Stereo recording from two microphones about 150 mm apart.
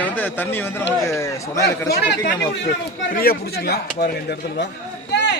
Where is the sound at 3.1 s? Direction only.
80° left.